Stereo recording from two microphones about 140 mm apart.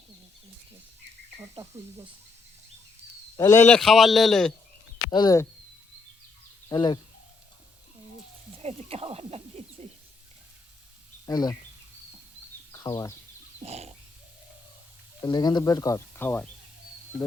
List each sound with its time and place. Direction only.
1.4 s cricket: 20° right (ahead or behind)
3.3 s a man's voice: 25° left (ahead or behind)
3.8 s a man's voice: centre (ahead or behind)
5.1 s speech: 25° left (ahead or behind)
6.7 s speech: 35° left (ahead or behind)
8.5 s speech: 45° right (ahead or behind)
11.3 s speech: 25° left (ahead or behind)
12.7 s speech: 25° left (ahead or behind)
13.6 s speech: 50° right (ahead or behind)
15.2 s speech: 30° left (ahead or behind)